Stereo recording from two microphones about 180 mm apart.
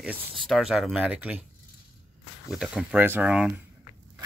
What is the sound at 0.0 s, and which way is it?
Speech, centre (ahead or behind).